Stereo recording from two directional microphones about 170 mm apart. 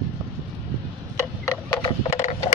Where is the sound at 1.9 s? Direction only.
40° left (ahead or behind).